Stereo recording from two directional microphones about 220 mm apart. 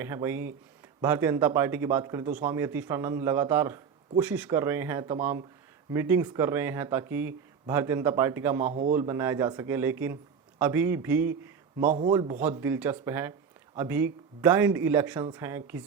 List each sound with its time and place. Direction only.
0.0 s speech: 10° right (ahead or behind)
8.7 s a man's voice: 35° right (ahead or behind)
9.0 s a man's voice: 10° right (ahead or behind)
11.9 s a man's voice: 30° right (ahead or behind)
12.1 s speech: 15° right (ahead or behind)